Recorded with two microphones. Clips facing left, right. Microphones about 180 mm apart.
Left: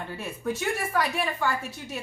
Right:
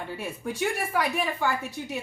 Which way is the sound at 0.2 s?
15° right (ahead or behind).